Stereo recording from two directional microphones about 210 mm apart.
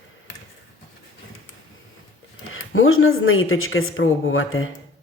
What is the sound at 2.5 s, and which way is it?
Speech, 75° left (ahead or behind).